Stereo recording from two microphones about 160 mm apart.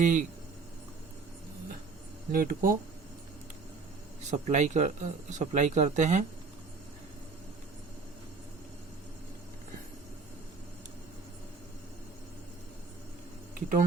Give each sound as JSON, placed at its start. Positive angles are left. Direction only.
{"t": 0.0, "sound": "speech", "side_deg": -50}
{"t": 2.3, "sound": "speech", "side_deg": -65}
{"t": 4.3, "sound": "speech", "side_deg": -45}
{"t": 13.5, "sound": "a sound", "side_deg": -55}